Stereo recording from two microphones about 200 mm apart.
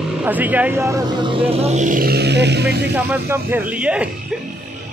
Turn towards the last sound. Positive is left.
turn(degrees=-5)  # may be behind; listen again after turning